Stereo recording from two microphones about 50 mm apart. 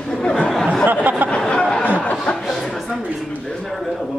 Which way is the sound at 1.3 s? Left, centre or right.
Centre.